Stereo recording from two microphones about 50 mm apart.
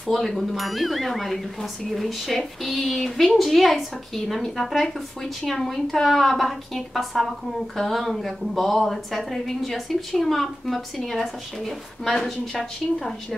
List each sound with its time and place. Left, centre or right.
0.1 s a woman's voice: centre